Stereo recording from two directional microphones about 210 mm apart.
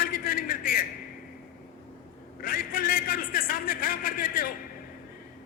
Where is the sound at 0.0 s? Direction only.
40° left (ahead or behind).